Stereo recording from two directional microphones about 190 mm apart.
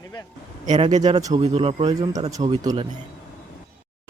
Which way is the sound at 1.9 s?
20° right (ahead or behind).